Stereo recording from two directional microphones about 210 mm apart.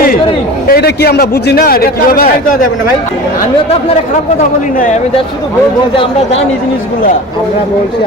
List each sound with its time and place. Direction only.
0.7 s a man's voice: 50° left (ahead or behind)